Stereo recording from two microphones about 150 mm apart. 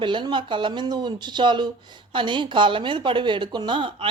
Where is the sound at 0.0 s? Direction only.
30° right (ahead or behind).